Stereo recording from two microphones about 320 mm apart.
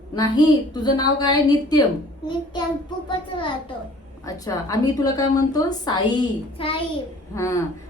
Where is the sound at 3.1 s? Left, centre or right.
Centre.